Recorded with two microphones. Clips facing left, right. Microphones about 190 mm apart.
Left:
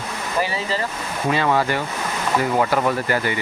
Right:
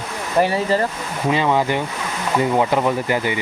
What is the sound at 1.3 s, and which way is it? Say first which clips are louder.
Speech: right 2 dB; 15° right (ahead or behind).